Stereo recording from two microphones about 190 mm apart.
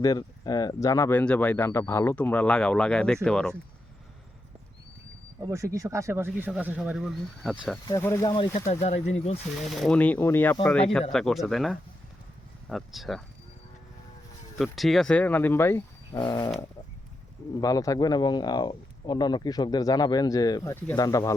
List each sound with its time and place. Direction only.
0.0 s speech: 20° left (ahead or behind); by 3.5 s 5° left (ahead or behind)
5.5 s speech: 15° right (ahead or behind)
7.9 s speech: 15° left (ahead or behind)
8.7 s speech: 35° left (ahead or behind)
9.6 s speech: centre (ahead or behind)
14.6 s speech: centre (ahead or behind)
16.1 s speech: 25° left (ahead or behind)
17.6 s speech: 20° left (ahead or behind)